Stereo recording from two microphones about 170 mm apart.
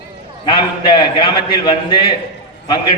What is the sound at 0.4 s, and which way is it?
A man's voice, 30° left (ahead or behind).